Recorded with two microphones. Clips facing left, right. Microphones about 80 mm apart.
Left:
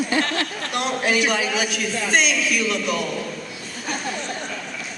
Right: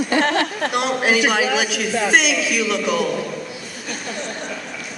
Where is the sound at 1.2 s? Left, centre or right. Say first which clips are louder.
Right 4 dB; right.